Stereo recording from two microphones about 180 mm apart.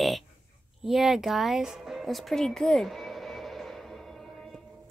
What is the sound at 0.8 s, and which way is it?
Music, centre (ahead or behind).